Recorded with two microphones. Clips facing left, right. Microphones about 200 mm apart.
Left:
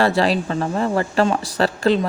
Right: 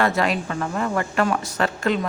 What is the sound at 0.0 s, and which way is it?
Speech, 30° left (ahead or behind).